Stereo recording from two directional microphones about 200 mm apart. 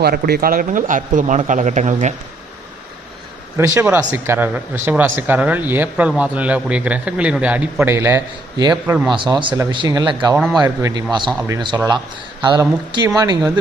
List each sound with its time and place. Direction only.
0.0 s speech: 50° right (ahead or behind)
3.6 s speech: 10° right (ahead or behind)